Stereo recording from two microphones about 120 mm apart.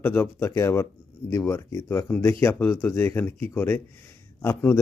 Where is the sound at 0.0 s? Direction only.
20° left (ahead or behind).